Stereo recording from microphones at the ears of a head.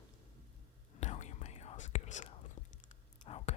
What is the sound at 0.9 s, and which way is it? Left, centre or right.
Whispering, left.